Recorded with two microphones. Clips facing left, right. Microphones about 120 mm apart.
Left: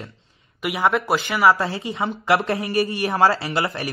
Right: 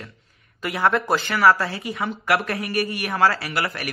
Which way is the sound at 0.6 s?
10° left (ahead or behind).